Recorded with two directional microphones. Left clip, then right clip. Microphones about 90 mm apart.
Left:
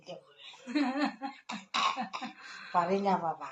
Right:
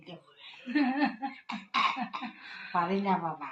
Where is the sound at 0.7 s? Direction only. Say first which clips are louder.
Right 3 dB; 60° left (ahead or behind); by 3.5 s 40° left (ahead or behind).